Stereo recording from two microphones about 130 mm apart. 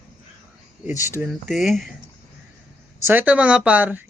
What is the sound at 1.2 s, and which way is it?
Speech, centre (ahead or behind).